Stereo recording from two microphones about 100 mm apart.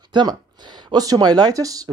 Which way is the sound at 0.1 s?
45° right (ahead or behind).